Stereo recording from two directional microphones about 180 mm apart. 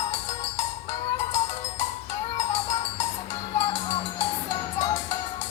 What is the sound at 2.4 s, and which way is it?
Music, 40° left (ahead or behind).